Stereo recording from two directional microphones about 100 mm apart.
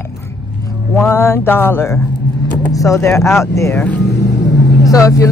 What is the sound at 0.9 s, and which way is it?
Speech, 25° left (ahead or behind).